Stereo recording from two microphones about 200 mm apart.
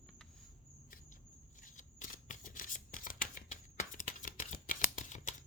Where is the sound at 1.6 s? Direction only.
40° left (ahead or behind).